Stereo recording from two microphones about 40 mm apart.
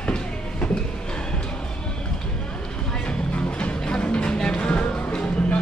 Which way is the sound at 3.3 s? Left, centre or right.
Left.